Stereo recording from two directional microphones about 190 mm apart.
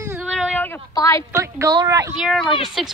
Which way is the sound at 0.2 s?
Centre (ahead or behind).